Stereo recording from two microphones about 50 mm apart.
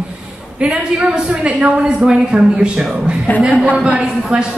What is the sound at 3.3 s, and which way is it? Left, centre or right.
Speech, left.